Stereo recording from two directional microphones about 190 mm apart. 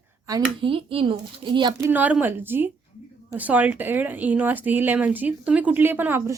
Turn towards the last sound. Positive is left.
turn(degrees=-10)  # may be behind; listen again after turning